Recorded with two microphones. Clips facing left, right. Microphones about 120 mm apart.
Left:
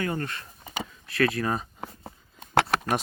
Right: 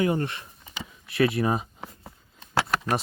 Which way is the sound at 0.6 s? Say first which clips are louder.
Left 9 dB; 45° left (ahead or behind).